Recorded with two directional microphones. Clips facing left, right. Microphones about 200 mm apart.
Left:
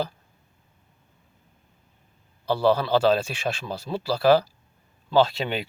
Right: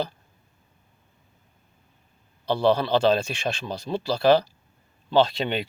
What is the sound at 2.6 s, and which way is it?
Speech, 5° left (ahead or behind).